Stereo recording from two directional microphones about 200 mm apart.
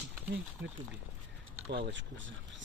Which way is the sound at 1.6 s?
65° right (ahead or behind).